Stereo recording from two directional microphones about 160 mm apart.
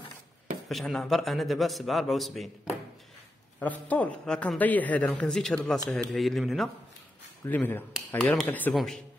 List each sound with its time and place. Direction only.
0.7 s a man's voice: centre (ahead or behind)
3.5 s a man's voice: 10° left (ahead or behind)
7.4 s a man's voice: 10° left (ahead or behind)